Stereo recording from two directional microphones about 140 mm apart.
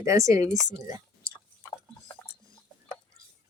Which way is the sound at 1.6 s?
20° left (ahead or behind).